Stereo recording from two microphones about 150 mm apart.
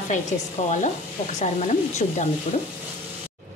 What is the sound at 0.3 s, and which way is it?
Speech, 55° left (ahead or behind).